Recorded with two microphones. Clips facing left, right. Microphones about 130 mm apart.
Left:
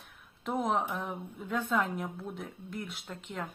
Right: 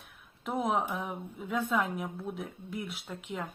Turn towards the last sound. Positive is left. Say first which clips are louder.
# right 1 dB
turn(degrees=-10)  # may be behind; listen again after turning